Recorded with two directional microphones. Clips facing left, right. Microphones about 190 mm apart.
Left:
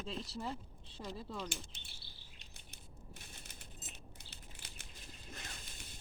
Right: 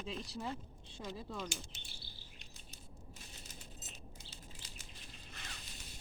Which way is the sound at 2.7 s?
60° left (ahead or behind).